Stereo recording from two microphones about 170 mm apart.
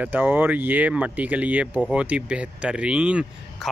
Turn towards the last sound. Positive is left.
turn(degrees=-5)  # may be behind; listen again after turning